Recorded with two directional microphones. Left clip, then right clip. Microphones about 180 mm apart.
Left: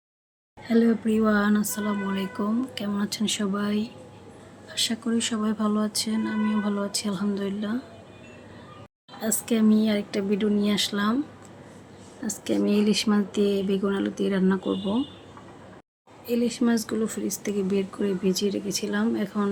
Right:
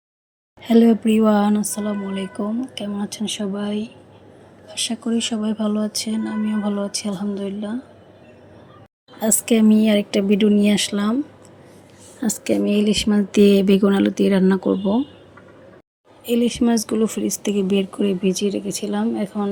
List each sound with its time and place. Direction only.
0.6 s speech: 40° right (ahead or behind); by 7.8 s 5° right (ahead or behind)
9.2 s speech: 35° right (ahead or behind)
12.5 s speech: 15° right (ahead or behind)
13.3 s speech: 45° right (ahead or behind)
16.2 s speech: 35° right (ahead or behind); by 19.5 s 15° right (ahead or behind)